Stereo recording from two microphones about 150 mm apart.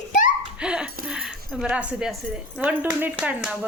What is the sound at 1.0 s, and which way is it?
Speech, 5° right (ahead or behind).